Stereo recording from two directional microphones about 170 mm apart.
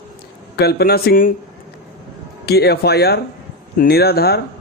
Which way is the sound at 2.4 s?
70° left (ahead or behind).